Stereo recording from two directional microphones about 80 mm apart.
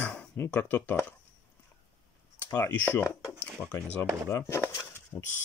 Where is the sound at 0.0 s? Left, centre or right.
Centre.